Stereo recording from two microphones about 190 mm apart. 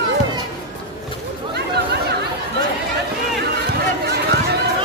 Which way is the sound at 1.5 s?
60° right (ahead or behind).